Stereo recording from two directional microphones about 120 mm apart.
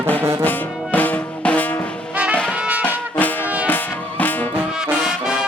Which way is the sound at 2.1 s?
10° right (ahead or behind).